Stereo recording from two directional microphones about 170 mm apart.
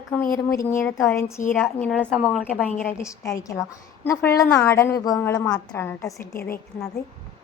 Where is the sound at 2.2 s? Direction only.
5° right (ahead or behind).